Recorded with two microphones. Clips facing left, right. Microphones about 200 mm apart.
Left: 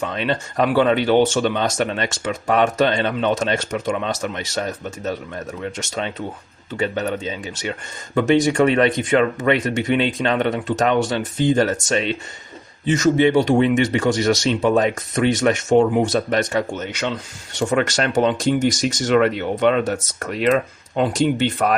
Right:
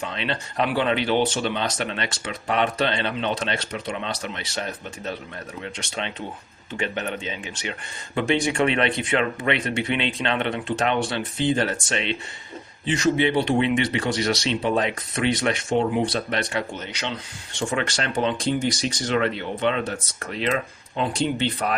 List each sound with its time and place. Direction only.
0.0 s speech: 45° left (ahead or behind)